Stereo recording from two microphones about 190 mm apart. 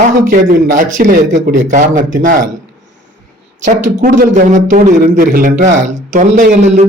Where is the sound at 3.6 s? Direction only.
45° right (ahead or behind).